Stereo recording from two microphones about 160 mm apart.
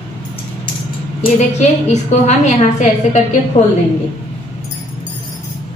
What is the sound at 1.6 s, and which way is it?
A woman's voice, 45° left (ahead or behind).